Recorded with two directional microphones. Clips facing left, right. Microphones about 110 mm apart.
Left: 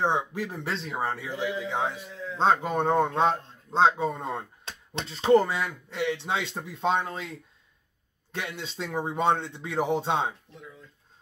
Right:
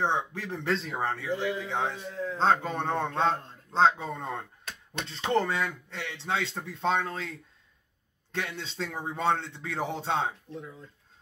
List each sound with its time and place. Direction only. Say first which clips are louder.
0.0 s a man's voice: left 2 dB; 10° left (ahead or behind)